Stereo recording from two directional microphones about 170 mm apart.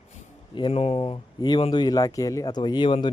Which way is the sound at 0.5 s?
35° left (ahead or behind).